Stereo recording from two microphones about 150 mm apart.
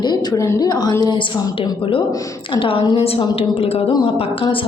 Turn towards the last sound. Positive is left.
turn(degrees=35)  # may be behind; listen again after turning